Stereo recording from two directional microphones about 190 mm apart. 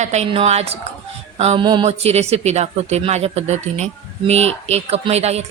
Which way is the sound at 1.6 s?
25° right (ahead or behind).